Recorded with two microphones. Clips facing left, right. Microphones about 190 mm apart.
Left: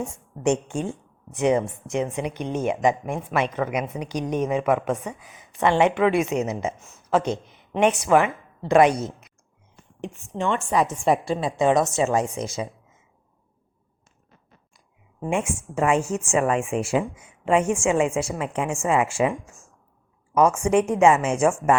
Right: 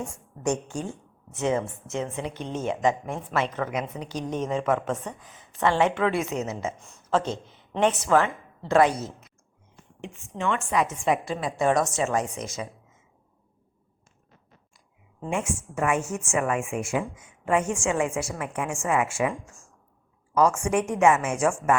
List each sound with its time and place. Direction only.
0.1 s a woman's voice: 25° left (ahead or behind)
6.7 s speech: centre (ahead or behind)
7.2 s a woman's voice: 15° left (ahead or behind)
10.0 s a woman's voice: 30° left (ahead or behind)
15.2 s a woman's voice: 25° left (ahead or behind)